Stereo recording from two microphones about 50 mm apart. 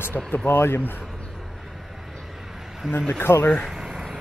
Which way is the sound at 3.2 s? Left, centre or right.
Left.